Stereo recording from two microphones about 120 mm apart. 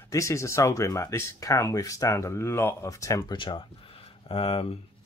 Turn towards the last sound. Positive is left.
turn(degrees=55)  # may be behind; listen again after turning